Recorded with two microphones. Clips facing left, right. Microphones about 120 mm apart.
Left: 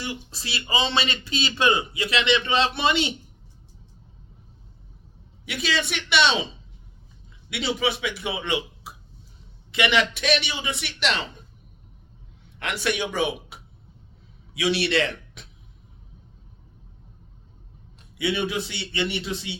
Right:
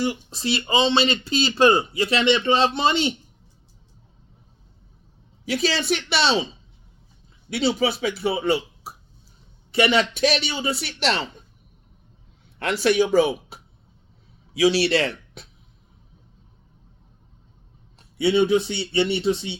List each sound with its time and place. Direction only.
0.0 s speech: 25° right (ahead or behind)
5.5 s speech: 35° right (ahead or behind)
7.5 s speech: 30° right (ahead or behind)
12.5 s a man's voice: 35° right (ahead or behind)
18.2 s speech: 30° right (ahead or behind)